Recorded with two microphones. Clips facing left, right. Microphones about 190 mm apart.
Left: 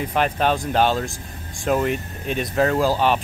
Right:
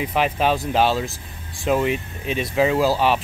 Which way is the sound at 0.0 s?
5° right (ahead or behind).